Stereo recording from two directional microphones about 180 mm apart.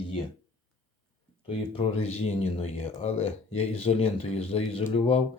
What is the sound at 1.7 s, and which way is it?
Speech, 30° left (ahead or behind).